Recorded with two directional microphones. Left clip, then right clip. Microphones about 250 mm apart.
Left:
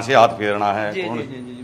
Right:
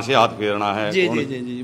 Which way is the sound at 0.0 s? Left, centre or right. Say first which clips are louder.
Left 3 dB; centre.